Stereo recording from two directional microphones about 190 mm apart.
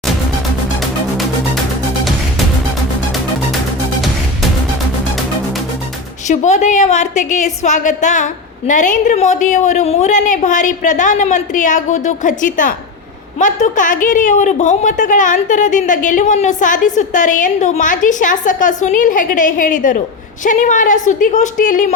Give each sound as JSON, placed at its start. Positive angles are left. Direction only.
{"t": 6.2, "sound": "a woman's voice", "side_deg": 40}